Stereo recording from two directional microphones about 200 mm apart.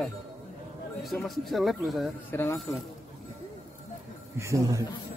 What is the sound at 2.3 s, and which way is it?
Speech, 10° left (ahead or behind).